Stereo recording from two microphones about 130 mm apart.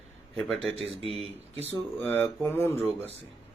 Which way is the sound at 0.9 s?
50° right (ahead or behind).